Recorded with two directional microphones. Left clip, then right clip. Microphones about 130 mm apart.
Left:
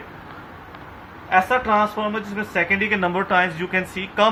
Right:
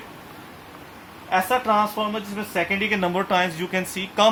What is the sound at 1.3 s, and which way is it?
A woman's voice, 90° right.